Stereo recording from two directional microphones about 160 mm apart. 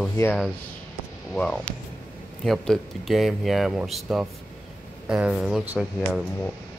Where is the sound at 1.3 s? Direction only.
5° left (ahead or behind).